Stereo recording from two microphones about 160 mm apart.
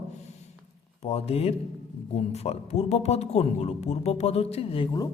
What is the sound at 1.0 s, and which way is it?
Speech, 40° left (ahead or behind).